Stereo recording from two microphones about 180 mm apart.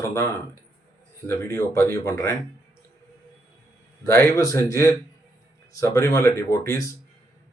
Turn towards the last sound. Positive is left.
turn(degrees=20)  # may be behind; listen again after turning